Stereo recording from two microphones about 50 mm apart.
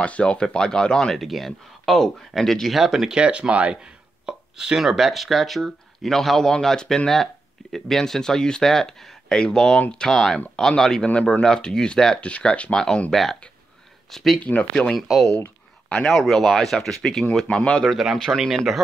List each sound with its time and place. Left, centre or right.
0.0 s speech: left; by 2.8 s centre
2.8 s speech: centre
3.2 s speech: centre
12.2 s speech: left
12.7 s speech: centre
14.4 s speech: left
15.0 s speech: centre; by 17.8 s left
17.8 s speech: centre